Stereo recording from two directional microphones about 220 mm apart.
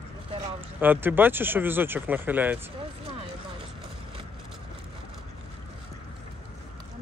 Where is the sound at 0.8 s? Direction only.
10° right (ahead or behind).